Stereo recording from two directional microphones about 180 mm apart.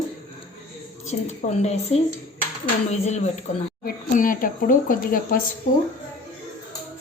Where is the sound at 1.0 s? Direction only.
40° left (ahead or behind).